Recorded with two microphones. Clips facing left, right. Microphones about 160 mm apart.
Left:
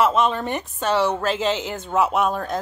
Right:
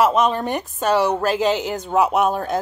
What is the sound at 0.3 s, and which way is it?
A woman's voice, centre (ahead or behind).